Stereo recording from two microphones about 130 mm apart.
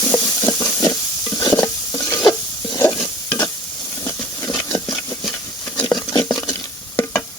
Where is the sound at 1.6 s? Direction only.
25° left (ahead or behind).